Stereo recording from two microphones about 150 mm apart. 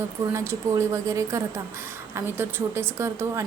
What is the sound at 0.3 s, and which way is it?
A woman's voice, 20° right (ahead or behind).